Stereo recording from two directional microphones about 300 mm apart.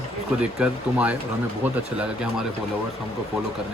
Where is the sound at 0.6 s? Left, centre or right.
Centre.